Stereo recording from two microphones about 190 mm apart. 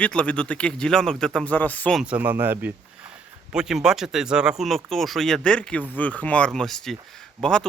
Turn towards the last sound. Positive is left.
turn(degrees=5)  # may be behind; listen again after turning